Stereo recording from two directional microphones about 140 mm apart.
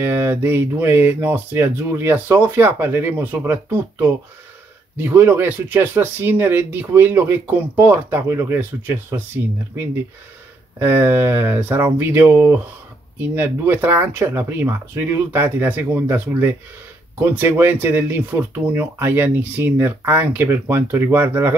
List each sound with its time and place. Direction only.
0.0 s speech: 15° right (ahead or behind)
10.8 s speech: 15° right (ahead or behind)